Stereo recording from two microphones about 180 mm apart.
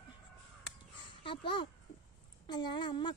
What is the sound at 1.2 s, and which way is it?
A child's voice, 25° left (ahead or behind).